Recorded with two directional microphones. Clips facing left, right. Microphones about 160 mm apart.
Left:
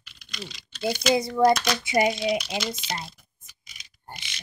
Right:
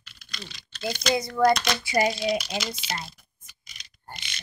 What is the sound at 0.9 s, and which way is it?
Speech, 5° left (ahead or behind).